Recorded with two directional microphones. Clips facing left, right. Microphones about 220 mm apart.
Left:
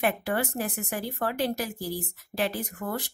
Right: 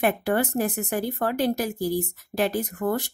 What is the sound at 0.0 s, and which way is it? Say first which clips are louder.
A woman's voice: right 4 dB; 45° right (ahead or behind).